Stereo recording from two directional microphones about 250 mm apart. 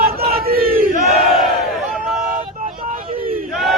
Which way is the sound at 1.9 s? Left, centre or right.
Centre.